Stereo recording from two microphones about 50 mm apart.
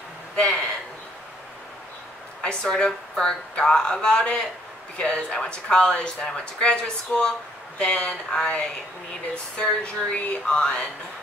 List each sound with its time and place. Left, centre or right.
0.4 s speech: left
2.4 s a woman's voice: left
7.8 s speech: left
8.3 s a woman's voice: centre